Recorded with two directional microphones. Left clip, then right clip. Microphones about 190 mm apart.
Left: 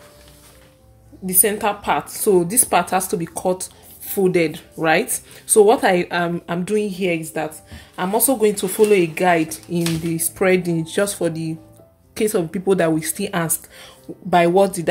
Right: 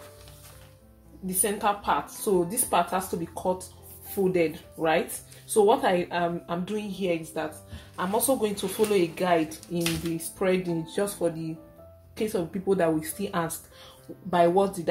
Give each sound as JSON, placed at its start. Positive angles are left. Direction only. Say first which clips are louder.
{"t": 1.4, "sound": "speech", "louder": "left 6 dB", "side_deg": 45}